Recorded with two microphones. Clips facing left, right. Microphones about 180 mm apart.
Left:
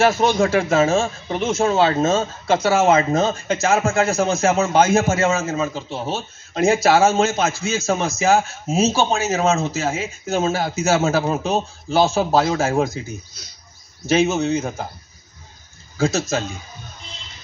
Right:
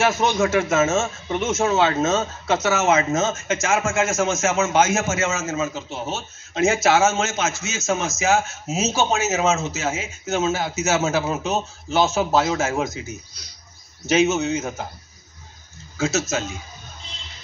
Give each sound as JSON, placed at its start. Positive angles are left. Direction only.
{"t": 0.0, "sound": "a man's voice", "side_deg": 30}
{"t": 16.0, "sound": "a man's voice", "side_deg": 30}